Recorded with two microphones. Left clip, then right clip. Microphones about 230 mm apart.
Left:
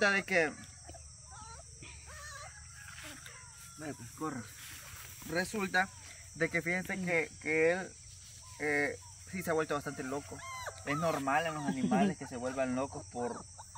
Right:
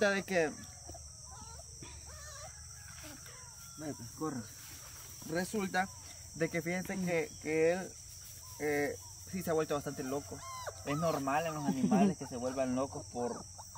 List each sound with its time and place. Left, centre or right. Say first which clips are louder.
0.0 s speech: left 2 dB; centre
3.8 s speech: even; centre